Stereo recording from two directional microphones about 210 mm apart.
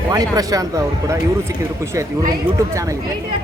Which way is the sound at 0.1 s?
15° right (ahead or behind).